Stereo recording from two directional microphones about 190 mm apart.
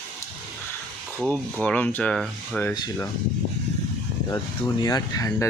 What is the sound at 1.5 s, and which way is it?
Speech, 5° left (ahead or behind).